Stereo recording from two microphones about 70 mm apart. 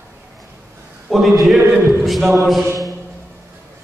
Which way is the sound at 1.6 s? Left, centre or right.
Right.